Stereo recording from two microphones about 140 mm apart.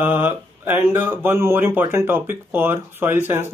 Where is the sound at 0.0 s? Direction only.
15° right (ahead or behind).